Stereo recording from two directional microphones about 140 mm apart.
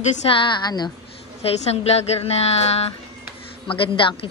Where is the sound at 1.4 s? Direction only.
50° left (ahead or behind).